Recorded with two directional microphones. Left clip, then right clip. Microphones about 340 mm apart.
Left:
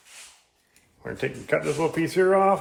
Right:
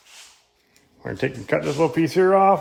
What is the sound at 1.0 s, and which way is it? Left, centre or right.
Speech, right.